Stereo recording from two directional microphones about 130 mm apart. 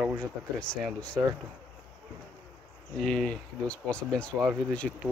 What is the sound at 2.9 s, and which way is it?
Speech, 5° left (ahead or behind).